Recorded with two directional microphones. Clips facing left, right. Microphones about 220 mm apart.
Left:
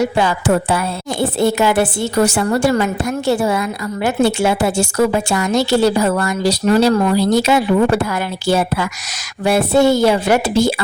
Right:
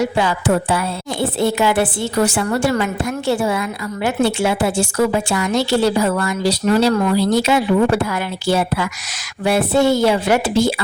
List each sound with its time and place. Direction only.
0.2 s a woman's voice: 45° left (ahead or behind)